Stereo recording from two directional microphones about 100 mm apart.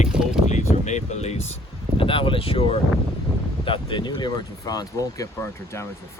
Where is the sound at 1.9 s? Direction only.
60° left (ahead or behind).